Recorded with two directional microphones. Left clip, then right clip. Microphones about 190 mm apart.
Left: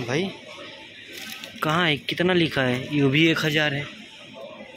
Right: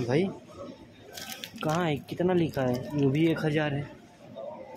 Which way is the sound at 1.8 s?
Centre (ahead or behind).